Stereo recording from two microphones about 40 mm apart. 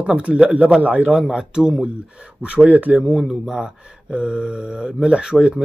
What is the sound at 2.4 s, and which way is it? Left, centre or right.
Speech, right.